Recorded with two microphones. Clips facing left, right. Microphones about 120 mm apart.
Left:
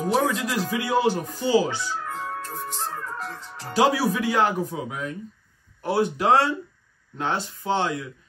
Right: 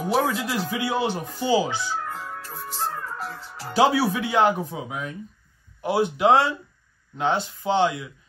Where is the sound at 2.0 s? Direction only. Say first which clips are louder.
Left 3 dB; centre (ahead or behind).